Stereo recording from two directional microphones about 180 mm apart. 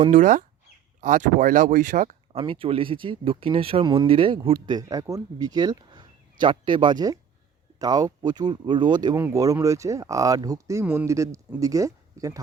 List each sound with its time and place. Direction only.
0.0 s speech: 45° right (ahead or behind)
2.4 s speech: 30° right (ahead or behind)